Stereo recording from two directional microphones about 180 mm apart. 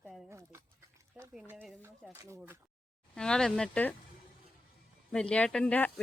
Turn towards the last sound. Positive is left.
turn(degrees=10)  # may be behind; listen again after turning